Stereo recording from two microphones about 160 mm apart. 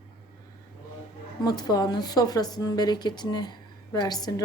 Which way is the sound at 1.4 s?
25° left (ahead or behind).